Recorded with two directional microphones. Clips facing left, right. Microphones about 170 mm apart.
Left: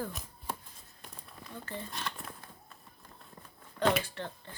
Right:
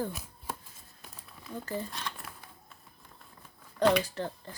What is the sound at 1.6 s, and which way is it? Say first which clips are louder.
Speech: right 6 dB; 40° right (ahead or behind).